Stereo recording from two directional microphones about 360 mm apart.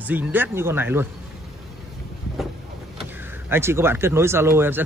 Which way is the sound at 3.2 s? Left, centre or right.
Centre.